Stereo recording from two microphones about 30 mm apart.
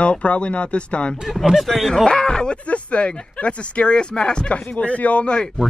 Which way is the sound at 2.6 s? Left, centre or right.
Left.